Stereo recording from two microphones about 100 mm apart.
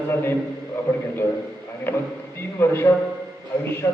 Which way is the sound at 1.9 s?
20° left (ahead or behind).